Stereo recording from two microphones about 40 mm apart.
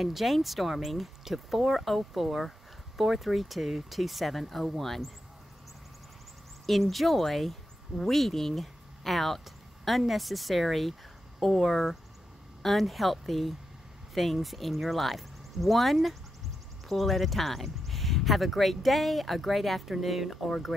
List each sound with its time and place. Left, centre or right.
0.0 s speech: centre
6.6 s speech: centre